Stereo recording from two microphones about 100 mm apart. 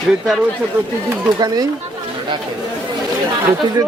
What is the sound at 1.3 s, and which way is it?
Speech, 40° right (ahead or behind).